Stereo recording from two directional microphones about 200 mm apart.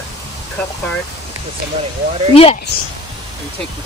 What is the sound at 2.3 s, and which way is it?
Speech, 30° left (ahead or behind).